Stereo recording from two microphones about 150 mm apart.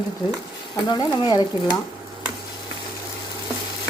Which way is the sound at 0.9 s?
30° left (ahead or behind).